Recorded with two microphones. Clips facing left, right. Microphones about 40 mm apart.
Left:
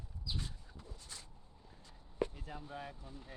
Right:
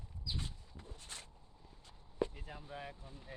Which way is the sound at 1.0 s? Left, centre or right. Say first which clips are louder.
Right 4 dB; right.